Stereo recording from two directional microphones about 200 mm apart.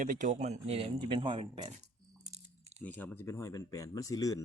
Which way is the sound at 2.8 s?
10° left (ahead or behind).